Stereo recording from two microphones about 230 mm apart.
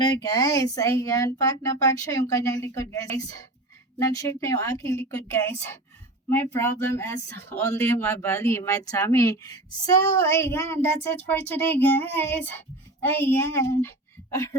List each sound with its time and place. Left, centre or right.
0.0 s speech: centre